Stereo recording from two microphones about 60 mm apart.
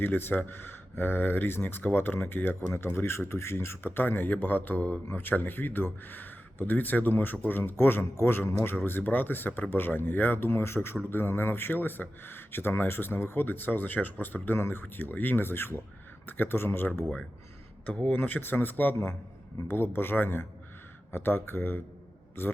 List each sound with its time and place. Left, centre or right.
0.0 s speech: left
17.8 s speech: left